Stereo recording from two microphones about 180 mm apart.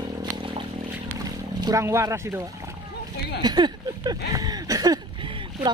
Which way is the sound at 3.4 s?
25° right (ahead or behind).